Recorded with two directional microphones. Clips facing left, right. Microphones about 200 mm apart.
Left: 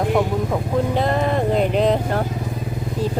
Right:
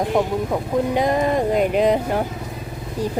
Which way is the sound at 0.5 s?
15° right (ahead or behind).